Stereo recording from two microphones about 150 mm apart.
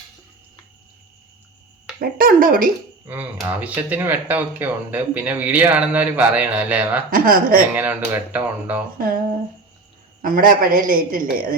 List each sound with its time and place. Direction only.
2.0 s a man's voice: 70° right (ahead or behind)
3.4 s speech: 10° right (ahead or behind)
7.1 s a man's voice: 75° right (ahead or behind)
7.8 s speech: 10° right (ahead or behind)
10.2 s a man's voice: 70° right (ahead or behind)